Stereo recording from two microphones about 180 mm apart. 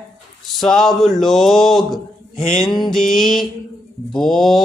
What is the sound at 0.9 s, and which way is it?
Mantra, centre (ahead or behind).